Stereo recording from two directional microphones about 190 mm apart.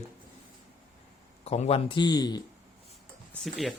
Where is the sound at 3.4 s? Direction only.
Centre (ahead or behind).